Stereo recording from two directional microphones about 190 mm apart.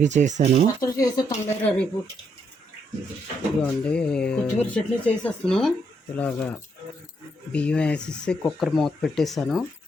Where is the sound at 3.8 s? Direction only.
5° left (ahead or behind).